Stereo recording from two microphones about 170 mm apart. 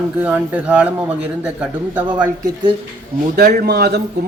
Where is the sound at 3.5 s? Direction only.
70° right (ahead or behind).